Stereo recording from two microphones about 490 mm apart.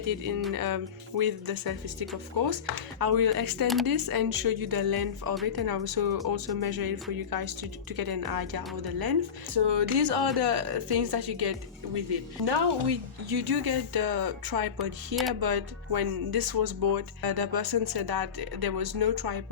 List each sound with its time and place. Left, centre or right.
0.0 s speech: right
15.1 s speech: centre
15.4 s speech: right